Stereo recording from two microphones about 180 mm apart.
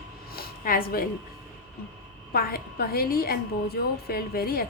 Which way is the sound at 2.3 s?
55° left (ahead or behind).